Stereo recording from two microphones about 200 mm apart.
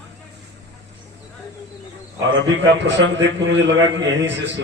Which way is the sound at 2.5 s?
65° right (ahead or behind).